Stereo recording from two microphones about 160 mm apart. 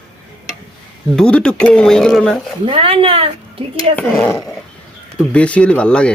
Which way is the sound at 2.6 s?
35° right (ahead or behind).